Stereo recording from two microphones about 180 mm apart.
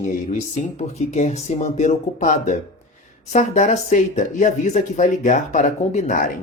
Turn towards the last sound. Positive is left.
turn(degrees=45)  # may be behind; listen again after turning